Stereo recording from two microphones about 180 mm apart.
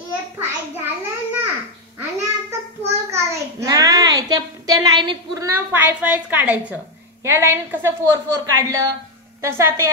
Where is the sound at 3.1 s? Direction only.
20° right (ahead or behind).